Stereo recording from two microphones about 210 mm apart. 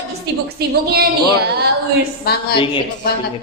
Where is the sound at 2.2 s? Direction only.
45° left (ahead or behind).